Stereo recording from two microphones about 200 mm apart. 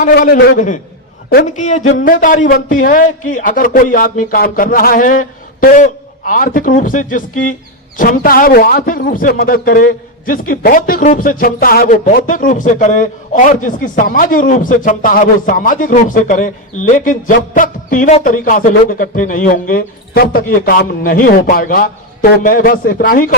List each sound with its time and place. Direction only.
0.1 s a man's voice: 55° left (ahead or behind)